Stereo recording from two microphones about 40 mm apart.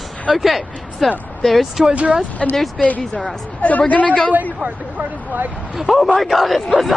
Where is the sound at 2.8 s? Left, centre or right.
Left.